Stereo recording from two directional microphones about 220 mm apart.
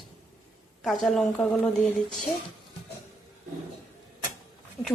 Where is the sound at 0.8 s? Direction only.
Centre (ahead or behind).